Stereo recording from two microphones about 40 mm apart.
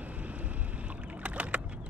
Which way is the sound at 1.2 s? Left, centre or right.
Right.